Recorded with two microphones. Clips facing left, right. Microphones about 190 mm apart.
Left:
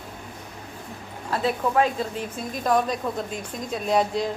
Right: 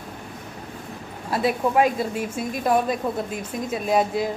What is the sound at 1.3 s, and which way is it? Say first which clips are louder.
A woman's voice: right 2 dB; 10° right (ahead or behind).